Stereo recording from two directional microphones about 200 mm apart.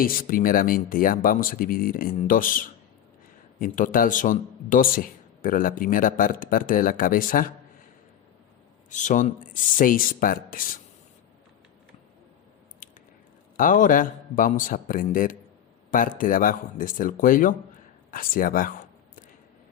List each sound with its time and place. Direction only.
0.0 s speech: 45° left (ahead or behind)
8.9 s speech: 40° left (ahead or behind)
13.6 s speech: 40° left (ahead or behind)